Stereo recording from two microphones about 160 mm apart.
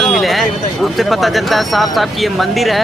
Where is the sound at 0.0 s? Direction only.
Centre (ahead or behind).